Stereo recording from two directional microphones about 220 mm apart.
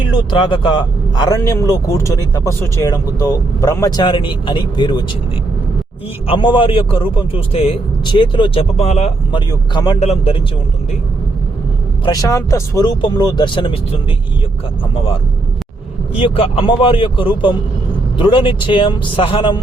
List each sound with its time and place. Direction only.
0.3 s speech: 20° left (ahead or behind)
6.2 s speech: 20° left (ahead or behind)
12.0 s speech: 15° left (ahead or behind)
16.2 s speech: 25° left (ahead or behind)